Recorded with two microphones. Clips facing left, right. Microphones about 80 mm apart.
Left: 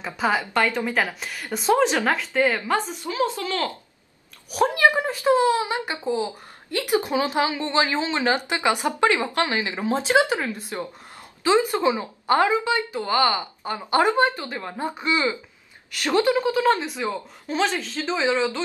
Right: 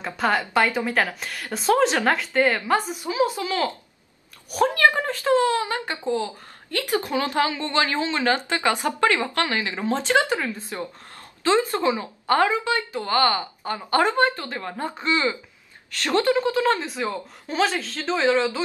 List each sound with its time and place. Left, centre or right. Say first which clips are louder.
0.0 s a woman's voice: even; centre
0.5 s a woman's voice: right 1 dB; centre
4.6 s speech: even; centre
17.1 s a woman's voice: left 2 dB; centre